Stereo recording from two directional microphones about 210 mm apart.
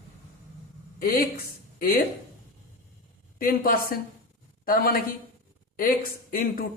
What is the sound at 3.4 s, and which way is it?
A man's voice, 45° left (ahead or behind).